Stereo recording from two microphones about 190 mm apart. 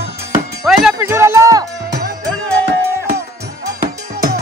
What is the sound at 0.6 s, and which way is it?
Music, 5° right (ahead or behind).